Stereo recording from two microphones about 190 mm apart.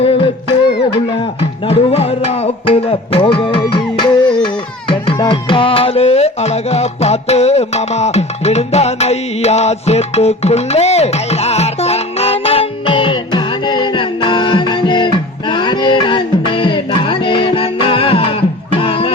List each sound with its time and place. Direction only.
0.0 s music: 30° left (ahead or behind)